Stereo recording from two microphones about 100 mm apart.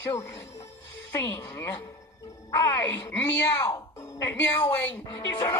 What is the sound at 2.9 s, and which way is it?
Speech, 15° left (ahead or behind).